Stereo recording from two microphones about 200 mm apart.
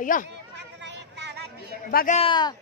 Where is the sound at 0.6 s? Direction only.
60° right (ahead or behind).